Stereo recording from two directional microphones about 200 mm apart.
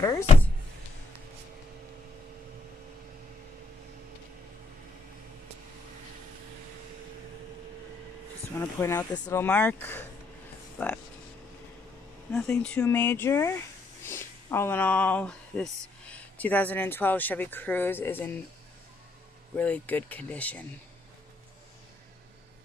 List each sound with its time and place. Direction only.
8.5 s speech: 10° left (ahead or behind)
12.3 s speech: 5° left (ahead or behind)
19.5 s speech: 5° left (ahead or behind)